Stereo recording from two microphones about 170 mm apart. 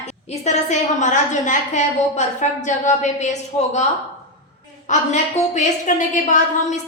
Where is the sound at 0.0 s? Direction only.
40° left (ahead or behind).